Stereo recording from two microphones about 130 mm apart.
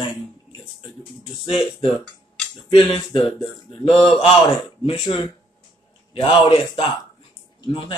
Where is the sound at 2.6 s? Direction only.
40° left (ahead or behind).